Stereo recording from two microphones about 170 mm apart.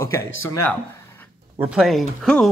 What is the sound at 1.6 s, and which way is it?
Speech, centre (ahead or behind).